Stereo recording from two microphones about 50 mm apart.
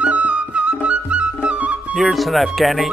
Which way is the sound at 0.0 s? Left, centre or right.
Right.